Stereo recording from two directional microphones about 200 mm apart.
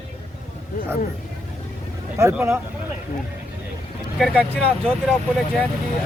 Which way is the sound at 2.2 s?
15° right (ahead or behind).